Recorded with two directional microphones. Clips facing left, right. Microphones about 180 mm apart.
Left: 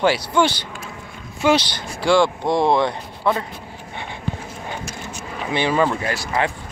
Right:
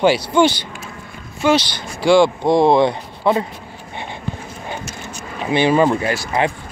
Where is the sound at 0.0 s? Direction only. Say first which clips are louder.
Right 4 dB; 25° right (ahead or behind).